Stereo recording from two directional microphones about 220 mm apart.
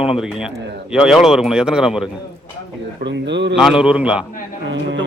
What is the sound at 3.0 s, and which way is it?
Speech, 50° right (ahead or behind).